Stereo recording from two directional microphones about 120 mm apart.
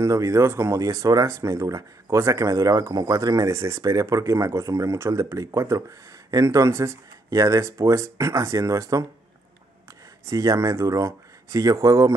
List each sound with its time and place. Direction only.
0.0 s speech: 25° right (ahead or behind)
10.3 s speech: 30° right (ahead or behind)